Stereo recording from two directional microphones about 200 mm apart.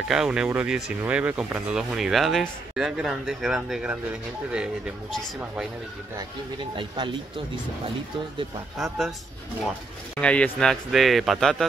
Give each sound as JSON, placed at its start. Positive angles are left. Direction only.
{"t": 0.1, "sound": "speech", "side_deg": -5}
{"t": 6.1, "sound": "speech", "side_deg": -25}
{"t": 8.7, "sound": "speech", "side_deg": 0}
{"t": 10.2, "sound": "speech", "side_deg": 5}